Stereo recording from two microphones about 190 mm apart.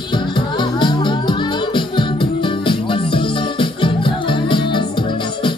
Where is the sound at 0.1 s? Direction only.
25° left (ahead or behind).